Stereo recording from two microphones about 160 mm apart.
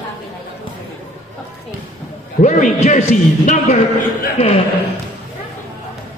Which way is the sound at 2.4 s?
50° left (ahead or behind).